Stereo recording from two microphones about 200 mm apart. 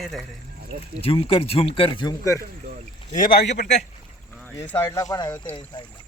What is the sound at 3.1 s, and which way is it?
Speech, 45° left (ahead or behind).